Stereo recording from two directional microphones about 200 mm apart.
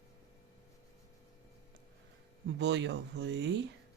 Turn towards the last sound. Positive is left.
turn(degrees=-60)  # may be behind; listen again after turning